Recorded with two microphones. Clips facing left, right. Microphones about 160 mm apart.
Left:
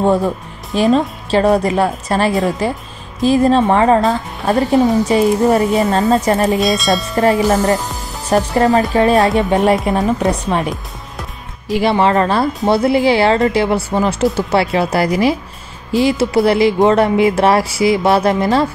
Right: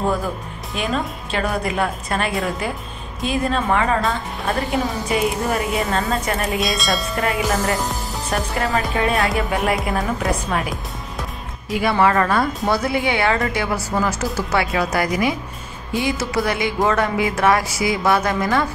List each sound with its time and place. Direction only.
0.0 s a woman's voice: 30° left (ahead or behind)
6.6 s speech: centre (ahead or behind)
7.2 s a woman's voice: 35° left (ahead or behind)
11.8 s speech: 25° left (ahead or behind)